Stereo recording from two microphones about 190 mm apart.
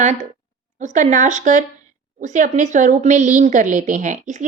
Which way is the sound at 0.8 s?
40° right (ahead or behind).